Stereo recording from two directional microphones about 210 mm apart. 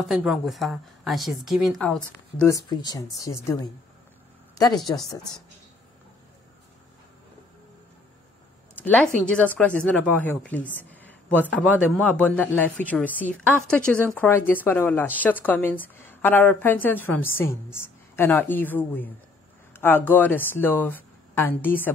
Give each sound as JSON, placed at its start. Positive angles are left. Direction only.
{"t": 0.0, "sound": "a woman's voice", "side_deg": 0}
{"t": 2.4, "sound": "a woman's voice", "side_deg": 15}
{"t": 4.9, "sound": "a woman's voice", "side_deg": 15}
{"t": 8.7, "sound": "a woman's voice", "side_deg": 5}